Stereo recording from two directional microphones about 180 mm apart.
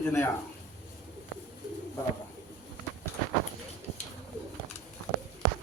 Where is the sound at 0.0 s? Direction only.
15° left (ahead or behind).